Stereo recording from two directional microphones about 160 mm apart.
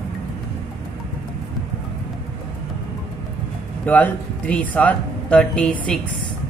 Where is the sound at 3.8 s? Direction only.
10° left (ahead or behind).